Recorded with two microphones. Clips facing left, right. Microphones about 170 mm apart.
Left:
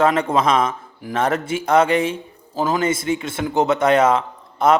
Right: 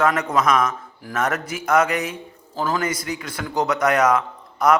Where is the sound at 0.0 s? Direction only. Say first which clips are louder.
Left 3 dB; 25° left (ahead or behind).